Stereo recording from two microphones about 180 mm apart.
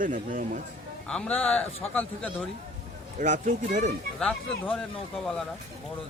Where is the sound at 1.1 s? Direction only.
5° left (ahead or behind).